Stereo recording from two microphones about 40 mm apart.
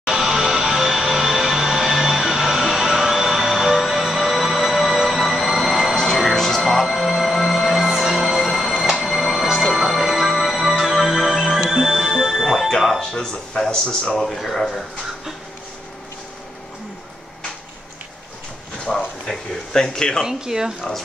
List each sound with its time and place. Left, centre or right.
0.1 s music: centre
13.0 s speech: centre
14.1 s speech: centre
18.9 s speech: centre
20.2 s speech: centre